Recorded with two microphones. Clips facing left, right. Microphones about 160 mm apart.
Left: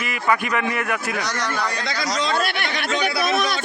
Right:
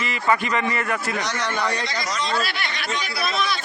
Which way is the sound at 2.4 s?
55° left (ahead or behind).